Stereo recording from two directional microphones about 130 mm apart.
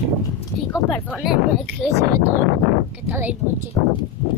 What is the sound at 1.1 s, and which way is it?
Speech, 5° right (ahead or behind).